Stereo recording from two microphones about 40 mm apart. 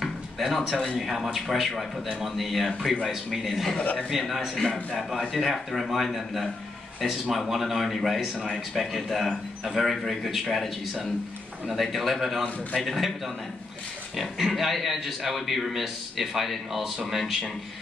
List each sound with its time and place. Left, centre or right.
0.0 s a man's voice: centre
3.7 s a man's voice: left
4.1 s a man's voice: centre
11.7 s a man's voice: centre
14.4 s a man's voice: centre